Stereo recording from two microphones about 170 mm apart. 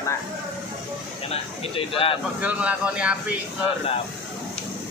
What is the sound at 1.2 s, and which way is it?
Speech, 35° left (ahead or behind).